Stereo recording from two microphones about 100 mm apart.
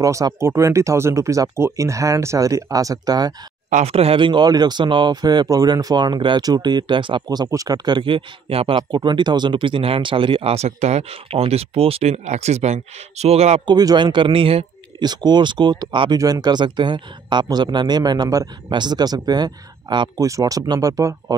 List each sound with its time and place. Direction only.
0.0 s speech: 35° right (ahead or behind)
3.8 s speech: 85° right; by 7.2 s 55° right (ahead or behind)
7.2 s speech: 40° right (ahead or behind); by 8.8 s 70° right (ahead or behind)
8.9 s speech: 50° right (ahead or behind); by 13.6 s 90° right
13.7 s speech: 45° right (ahead or behind); by 14.7 s 70° right (ahead or behind)
15.0 s speech: 45° right (ahead or behind)
20.2 s speech: 35° right (ahead or behind)